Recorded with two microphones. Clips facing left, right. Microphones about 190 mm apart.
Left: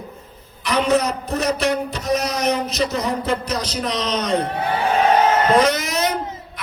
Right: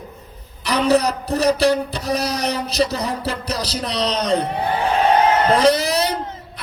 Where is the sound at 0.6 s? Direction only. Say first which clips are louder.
Right 2 dB; 35° right (ahead or behind).